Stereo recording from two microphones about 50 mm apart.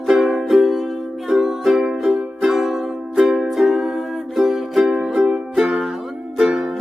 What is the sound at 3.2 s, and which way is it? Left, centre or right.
Music, centre.